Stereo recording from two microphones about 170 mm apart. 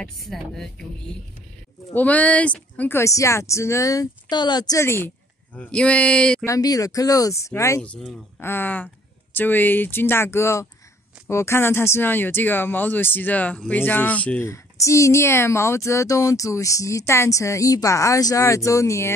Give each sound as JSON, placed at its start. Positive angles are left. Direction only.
{"t": 0.0, "sound": "speech", "side_deg": 0}
{"t": 2.0, "sound": "speech", "side_deg": 10}
{"t": 6.4, "sound": "speech", "side_deg": 20}